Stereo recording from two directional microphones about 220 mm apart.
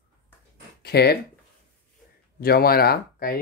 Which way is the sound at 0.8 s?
45° left (ahead or behind).